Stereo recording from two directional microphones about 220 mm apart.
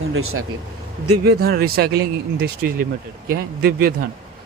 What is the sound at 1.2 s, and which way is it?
Speech, 45° right (ahead or behind).